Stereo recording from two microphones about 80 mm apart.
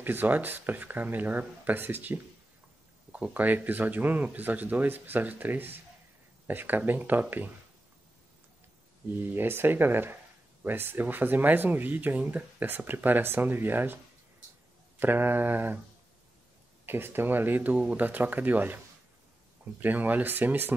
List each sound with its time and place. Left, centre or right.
0.0 s speech: right
9.3 s speech: right
15.0 s speech: right
16.8 s speech: right